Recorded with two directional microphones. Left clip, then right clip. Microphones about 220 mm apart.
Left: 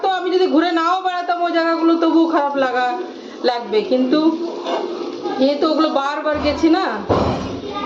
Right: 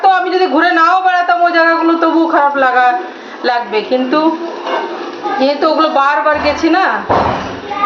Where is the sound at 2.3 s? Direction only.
55° left (ahead or behind).